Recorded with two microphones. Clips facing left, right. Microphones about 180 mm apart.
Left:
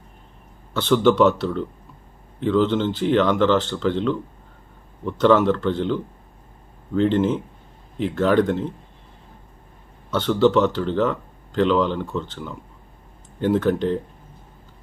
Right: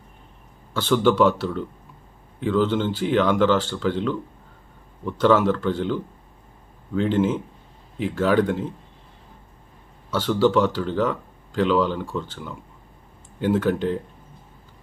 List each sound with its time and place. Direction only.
0.7 s speech: 10° right (ahead or behind)
7.0 s speech: 10° right (ahead or behind)
10.1 s speech: 10° right (ahead or behind)